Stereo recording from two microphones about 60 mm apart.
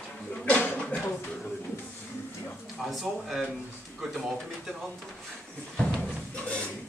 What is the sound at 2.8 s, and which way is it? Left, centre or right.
Speech, centre.